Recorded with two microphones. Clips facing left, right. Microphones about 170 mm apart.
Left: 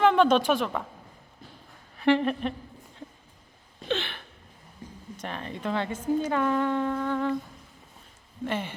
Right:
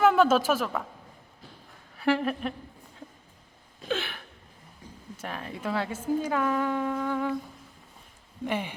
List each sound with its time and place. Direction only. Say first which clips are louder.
0.0 s a woman's voice: even; 5° right (ahead or behind)
2.0 s a woman's voice: left 3 dB; 5° right (ahead or behind)
3.8 s a sound: left 1 dB; 5° right (ahead or behind)
5.1 s a woman's voice: left 1 dB; 5° right (ahead or behind)
8.4 s a woman's voice: even; 15° right (ahead or behind)